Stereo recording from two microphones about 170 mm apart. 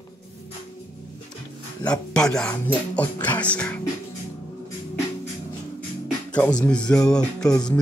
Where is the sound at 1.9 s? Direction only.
5° left (ahead or behind).